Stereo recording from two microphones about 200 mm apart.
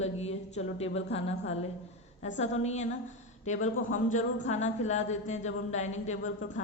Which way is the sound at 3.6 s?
75° left (ahead or behind).